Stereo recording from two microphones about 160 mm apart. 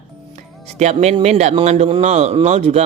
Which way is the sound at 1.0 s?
45° right (ahead or behind).